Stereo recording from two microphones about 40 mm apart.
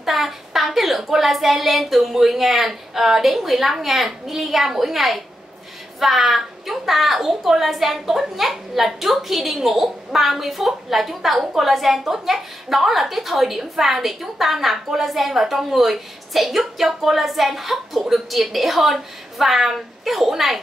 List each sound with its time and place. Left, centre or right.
0.0 s a woman's voice: centre